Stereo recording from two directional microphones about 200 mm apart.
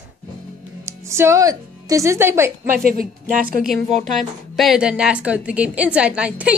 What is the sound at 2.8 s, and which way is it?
Speech, 45° right (ahead or behind).